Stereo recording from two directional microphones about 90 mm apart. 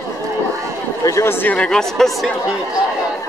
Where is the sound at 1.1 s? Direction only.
35° left (ahead or behind).